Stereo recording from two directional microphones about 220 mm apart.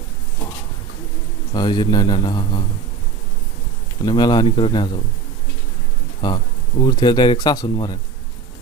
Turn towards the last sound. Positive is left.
turn(degrees=20)  # may be behind; listen again after turning